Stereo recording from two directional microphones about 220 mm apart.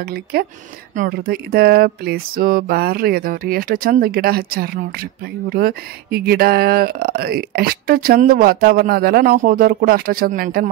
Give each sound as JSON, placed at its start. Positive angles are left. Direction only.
{"t": 0.1, "sound": "speech", "side_deg": -45}